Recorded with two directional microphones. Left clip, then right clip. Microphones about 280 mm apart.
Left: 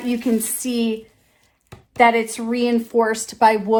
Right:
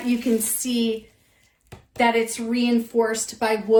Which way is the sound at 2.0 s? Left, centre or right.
Left.